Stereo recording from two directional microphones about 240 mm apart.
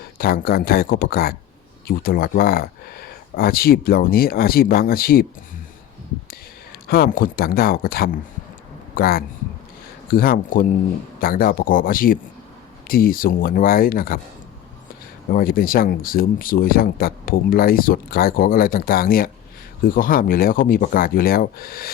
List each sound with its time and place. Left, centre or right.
0.2 s speech: left
6.8 s speech: left
15.3 s speech: left